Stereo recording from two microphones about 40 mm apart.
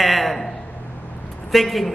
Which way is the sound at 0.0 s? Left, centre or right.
Centre.